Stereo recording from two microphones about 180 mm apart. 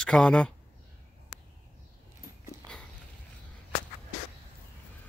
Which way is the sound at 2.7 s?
5° left (ahead or behind).